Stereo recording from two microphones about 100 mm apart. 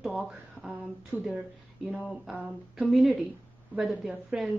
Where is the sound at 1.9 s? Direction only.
5° left (ahead or behind).